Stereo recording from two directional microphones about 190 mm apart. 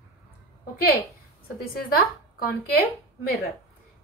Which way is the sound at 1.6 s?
50° left (ahead or behind).